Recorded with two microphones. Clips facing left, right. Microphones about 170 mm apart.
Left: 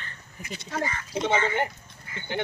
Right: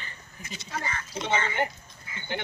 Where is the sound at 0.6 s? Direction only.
55° left (ahead or behind).